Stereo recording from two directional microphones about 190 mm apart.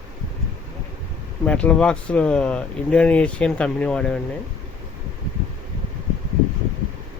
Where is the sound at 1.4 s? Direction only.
5° left (ahead or behind).